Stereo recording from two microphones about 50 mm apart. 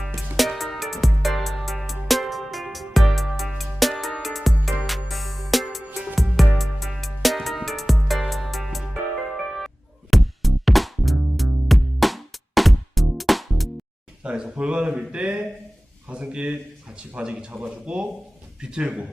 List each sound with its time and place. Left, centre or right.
0.3 s music: centre
14.3 s a sound: right
17.2 s speech: centre